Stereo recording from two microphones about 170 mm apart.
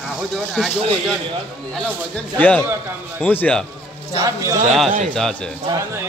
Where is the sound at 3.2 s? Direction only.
10° left (ahead or behind).